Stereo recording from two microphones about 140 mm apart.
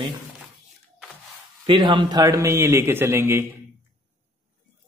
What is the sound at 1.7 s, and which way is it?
Speech, 35° right (ahead or behind).